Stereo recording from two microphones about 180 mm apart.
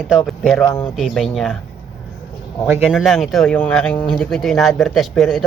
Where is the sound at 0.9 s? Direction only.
Centre (ahead or behind).